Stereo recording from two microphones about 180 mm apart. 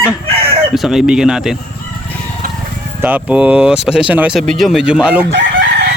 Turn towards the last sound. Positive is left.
turn(degrees=-70)  # may be behind; listen again after turning